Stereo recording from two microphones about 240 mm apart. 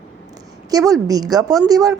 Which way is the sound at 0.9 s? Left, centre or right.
Centre.